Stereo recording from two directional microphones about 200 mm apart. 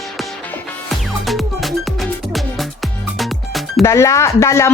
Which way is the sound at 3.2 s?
Centre (ahead or behind).